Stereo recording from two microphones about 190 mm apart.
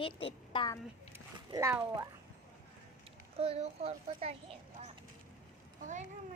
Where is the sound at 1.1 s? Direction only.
15° right (ahead or behind).